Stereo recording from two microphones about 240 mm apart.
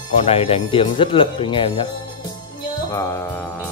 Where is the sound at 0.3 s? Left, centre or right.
Left.